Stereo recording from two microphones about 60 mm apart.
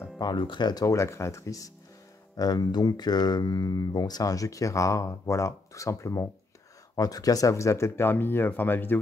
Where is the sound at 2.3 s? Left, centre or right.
Left.